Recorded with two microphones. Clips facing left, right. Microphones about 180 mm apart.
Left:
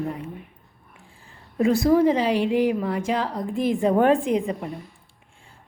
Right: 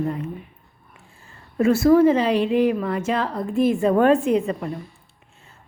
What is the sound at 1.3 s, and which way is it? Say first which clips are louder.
A woman's voice: right 2 dB; 15° left (ahead or behind).